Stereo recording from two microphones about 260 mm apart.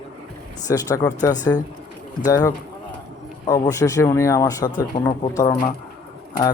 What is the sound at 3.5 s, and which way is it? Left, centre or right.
Speech, centre.